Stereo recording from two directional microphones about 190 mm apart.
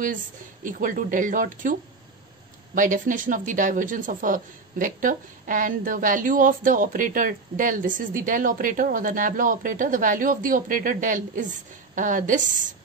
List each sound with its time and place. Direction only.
0.7 s speech: 45° right (ahead or behind)